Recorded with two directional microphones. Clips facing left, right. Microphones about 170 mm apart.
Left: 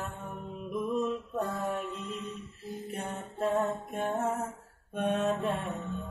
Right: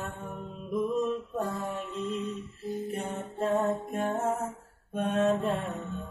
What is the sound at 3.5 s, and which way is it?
Mantra, centre (ahead or behind).